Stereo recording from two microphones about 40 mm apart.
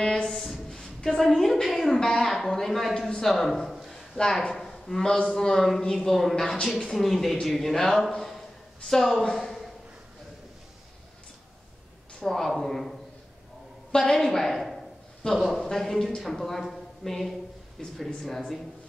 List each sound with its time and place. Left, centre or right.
0.0 s a woman's voice: centre
2.0 s a man's voice: centre
4.2 s a man's voice: centre
4.6 s a man's voice: centre
9.4 s a sound: centre
12.2 s a woman's voice: centre
13.9 s a woman's voice: centre
15.7 s a man's voice: centre